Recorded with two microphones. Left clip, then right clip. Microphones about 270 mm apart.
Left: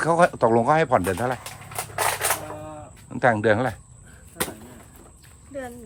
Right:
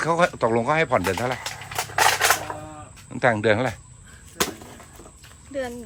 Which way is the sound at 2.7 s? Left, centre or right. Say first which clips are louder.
Left 1 dB; centre.